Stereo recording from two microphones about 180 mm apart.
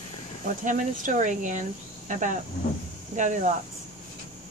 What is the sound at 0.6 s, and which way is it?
Speech, 45° right (ahead or behind).